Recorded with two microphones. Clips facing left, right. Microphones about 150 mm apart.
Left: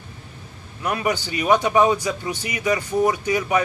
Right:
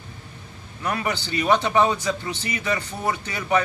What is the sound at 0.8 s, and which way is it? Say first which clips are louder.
A man's voice: left 3 dB; 10° left (ahead or behind).